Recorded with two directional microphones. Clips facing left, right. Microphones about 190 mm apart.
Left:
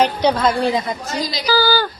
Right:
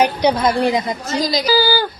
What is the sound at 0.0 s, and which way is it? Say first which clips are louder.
A woman's voice: right 1 dB; 15° right (ahead or behind).